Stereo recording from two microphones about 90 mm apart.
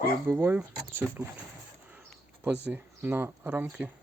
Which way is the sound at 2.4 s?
20° right (ahead or behind).